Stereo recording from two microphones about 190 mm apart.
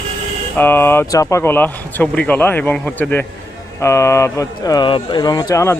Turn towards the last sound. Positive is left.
turn(degrees=15)  # may be behind; listen again after turning